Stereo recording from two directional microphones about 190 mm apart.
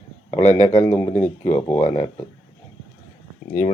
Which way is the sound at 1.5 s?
15° left (ahead or behind).